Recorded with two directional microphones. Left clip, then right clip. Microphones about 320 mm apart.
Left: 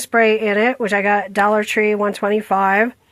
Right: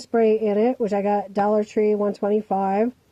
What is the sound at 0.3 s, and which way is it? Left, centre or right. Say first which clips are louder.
Speech: left 4 dB; left.